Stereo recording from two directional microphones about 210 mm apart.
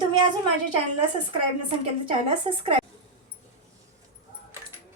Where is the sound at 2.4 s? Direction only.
25° right (ahead or behind).